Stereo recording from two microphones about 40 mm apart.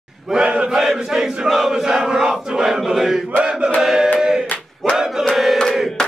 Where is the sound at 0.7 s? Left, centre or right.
Centre.